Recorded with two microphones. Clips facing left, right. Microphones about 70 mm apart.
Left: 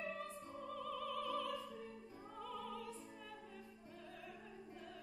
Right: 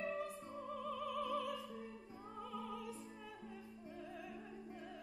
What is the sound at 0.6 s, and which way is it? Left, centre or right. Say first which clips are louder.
Music: right 1 dB; centre.